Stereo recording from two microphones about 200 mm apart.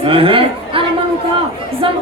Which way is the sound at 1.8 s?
25° right (ahead or behind).